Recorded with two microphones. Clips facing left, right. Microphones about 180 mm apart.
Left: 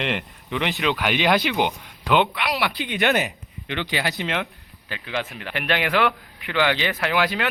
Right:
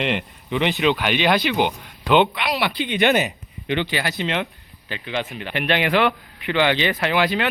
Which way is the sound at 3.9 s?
15° left (ahead or behind).